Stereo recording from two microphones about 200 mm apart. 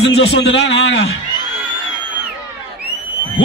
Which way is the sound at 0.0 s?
60° left (ahead or behind).